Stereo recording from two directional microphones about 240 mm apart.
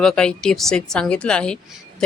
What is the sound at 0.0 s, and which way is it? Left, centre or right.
Speech, centre.